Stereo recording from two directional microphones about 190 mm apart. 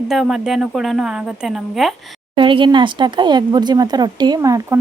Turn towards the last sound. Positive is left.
turn(degrees=-15)  # may be behind; listen again after turning